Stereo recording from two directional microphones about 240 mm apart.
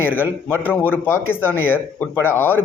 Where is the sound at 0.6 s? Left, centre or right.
Centre.